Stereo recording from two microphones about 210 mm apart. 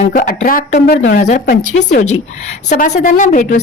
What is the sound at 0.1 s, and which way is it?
A woman's voice, 40° left (ahead or behind).